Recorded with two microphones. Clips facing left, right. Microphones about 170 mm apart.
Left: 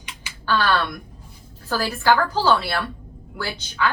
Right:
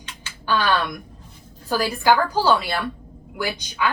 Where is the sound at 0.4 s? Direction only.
15° right (ahead or behind).